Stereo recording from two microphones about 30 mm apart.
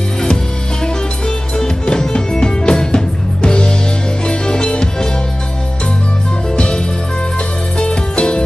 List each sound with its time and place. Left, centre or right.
1.6 s music: left
6.5 s music: left
7.8 s music: left